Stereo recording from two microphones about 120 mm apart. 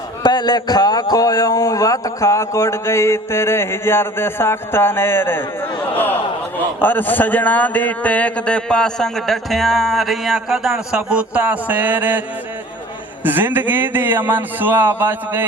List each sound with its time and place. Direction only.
0.2 s speech: 35° left (ahead or behind); by 5.5 s 20° left (ahead or behind)
6.7 s a man's voice: 15° left (ahead or behind); by 12.2 s 15° right (ahead or behind)
13.2 s speech: 15° right (ahead or behind)